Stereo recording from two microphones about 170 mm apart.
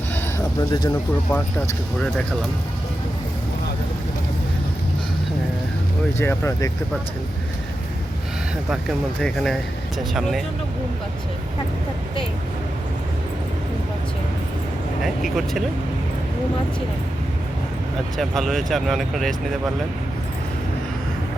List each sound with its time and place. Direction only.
0.7 s speech: 25° left (ahead or behind)
1.3 s speech: 5° left (ahead or behind)
6.1 s speech: 15° left (ahead or behind)
9.2 s speech: 5° left (ahead or behind)
15.0 s speech: centre (ahead or behind)
18.2 s speech: centre (ahead or behind)